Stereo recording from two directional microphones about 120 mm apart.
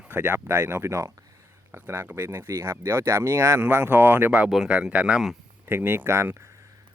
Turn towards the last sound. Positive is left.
turn(degrees=-20)  # may be behind; listen again after turning